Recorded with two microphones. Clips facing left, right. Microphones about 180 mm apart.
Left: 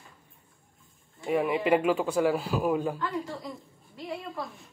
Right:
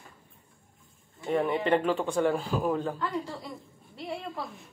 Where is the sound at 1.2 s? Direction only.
5° left (ahead or behind).